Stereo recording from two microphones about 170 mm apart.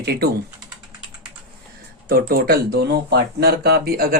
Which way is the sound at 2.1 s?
60° right (ahead or behind).